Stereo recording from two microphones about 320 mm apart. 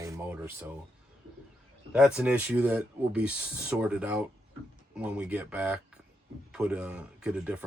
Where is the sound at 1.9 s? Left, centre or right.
Centre.